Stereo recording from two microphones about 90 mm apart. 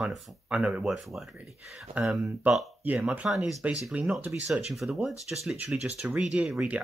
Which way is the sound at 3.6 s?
15° right (ahead or behind).